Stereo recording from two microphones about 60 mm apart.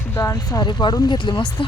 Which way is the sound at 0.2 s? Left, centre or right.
Left.